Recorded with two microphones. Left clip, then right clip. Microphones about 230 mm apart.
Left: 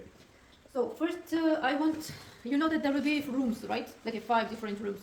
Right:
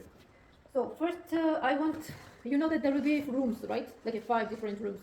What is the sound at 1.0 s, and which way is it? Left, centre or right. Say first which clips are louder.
A woman's voice: even; left.